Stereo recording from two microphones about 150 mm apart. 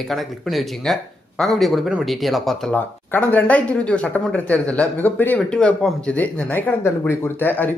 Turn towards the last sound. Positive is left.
turn(degrees=10)  # may be behind; listen again after turning